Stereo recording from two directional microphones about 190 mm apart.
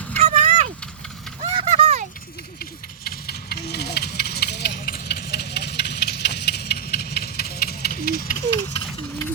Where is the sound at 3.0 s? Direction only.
55° left (ahead or behind).